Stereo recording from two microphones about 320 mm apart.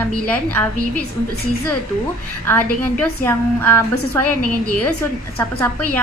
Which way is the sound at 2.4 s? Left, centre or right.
Centre.